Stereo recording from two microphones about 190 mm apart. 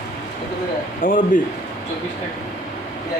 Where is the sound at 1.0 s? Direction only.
45° left (ahead or behind).